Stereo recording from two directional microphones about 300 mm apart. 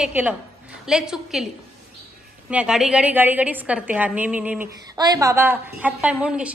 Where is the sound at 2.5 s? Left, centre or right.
Centre.